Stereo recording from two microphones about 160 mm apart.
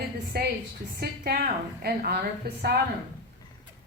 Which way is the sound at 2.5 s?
90° right.